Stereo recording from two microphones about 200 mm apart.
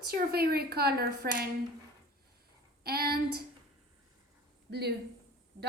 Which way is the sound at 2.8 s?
50° right (ahead or behind).